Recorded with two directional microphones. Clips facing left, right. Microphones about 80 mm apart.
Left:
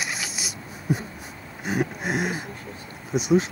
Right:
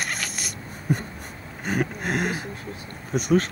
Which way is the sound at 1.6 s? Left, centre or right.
Right.